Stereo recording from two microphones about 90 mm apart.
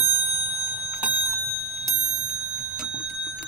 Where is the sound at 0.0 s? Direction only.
25° right (ahead or behind).